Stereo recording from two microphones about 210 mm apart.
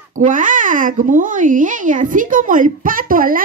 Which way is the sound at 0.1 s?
40° right (ahead or behind).